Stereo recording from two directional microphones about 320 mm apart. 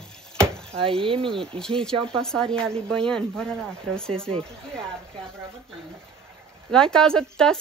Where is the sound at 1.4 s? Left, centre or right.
Centre.